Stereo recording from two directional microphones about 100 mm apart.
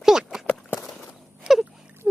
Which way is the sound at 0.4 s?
20° left (ahead or behind).